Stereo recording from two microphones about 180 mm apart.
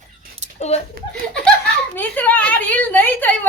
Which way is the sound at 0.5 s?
35° left (ahead or behind).